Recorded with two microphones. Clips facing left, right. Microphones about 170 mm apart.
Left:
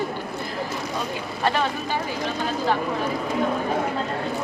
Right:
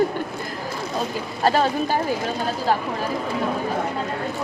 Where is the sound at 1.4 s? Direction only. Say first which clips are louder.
Right 4 dB; 40° right (ahead or behind).